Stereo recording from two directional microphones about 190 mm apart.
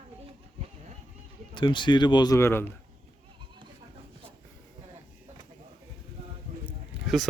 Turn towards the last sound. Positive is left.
turn(degrees=0)  # may be behind; listen again after turning